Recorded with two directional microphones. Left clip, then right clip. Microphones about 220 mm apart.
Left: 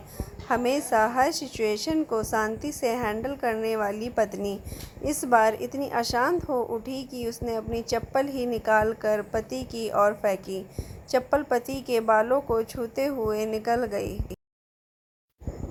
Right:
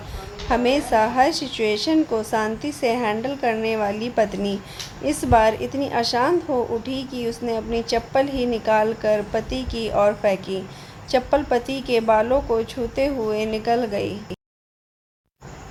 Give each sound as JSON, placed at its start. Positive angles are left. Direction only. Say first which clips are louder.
{"t": 0.4, "sound": "a woman's voice", "louder": "right 5 dB", "side_deg": 15}